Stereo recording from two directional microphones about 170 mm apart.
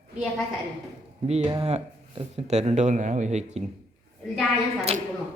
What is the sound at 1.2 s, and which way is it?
Speech, 35° right (ahead or behind).